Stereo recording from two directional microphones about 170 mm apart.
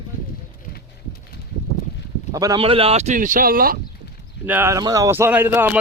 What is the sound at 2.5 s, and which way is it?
Speech, 35° right (ahead or behind).